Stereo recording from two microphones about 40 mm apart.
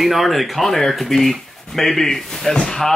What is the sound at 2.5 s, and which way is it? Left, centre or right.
Speech, left.